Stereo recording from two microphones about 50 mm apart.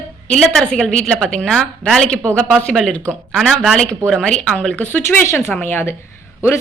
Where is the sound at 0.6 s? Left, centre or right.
Centre.